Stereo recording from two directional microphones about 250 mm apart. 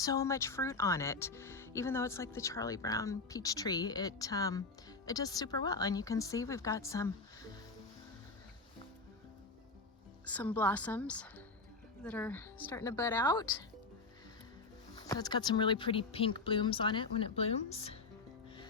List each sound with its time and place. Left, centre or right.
0.0 s speech: centre
10.2 s speech: centre
15.0 s speech: centre